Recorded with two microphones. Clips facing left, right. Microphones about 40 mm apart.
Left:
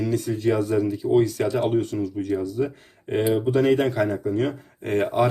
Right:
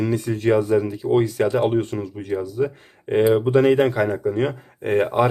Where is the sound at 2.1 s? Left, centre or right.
Right.